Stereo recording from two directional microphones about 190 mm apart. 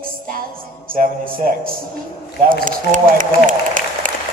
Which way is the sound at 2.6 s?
45° right (ahead or behind).